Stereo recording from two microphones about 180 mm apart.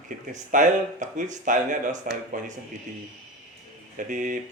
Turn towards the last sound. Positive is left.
turn(degrees=-45)  # may be behind; listen again after turning